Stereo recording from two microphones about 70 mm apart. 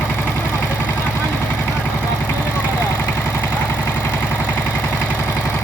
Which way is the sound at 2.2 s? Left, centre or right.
Left.